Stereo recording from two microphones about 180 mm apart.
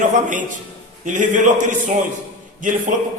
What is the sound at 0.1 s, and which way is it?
A man's voice, 45° right (ahead or behind).